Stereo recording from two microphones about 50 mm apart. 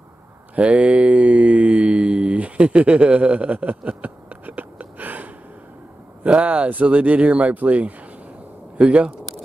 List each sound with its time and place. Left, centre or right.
0.6 s mantra: right
6.2 s speech: right